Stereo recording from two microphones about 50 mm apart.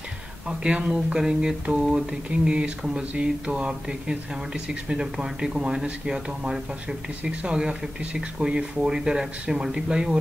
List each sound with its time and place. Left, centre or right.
0.5 s speech: centre